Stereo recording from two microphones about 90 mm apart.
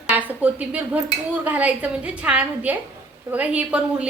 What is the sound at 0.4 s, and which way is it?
A woman's voice, 15° right (ahead or behind).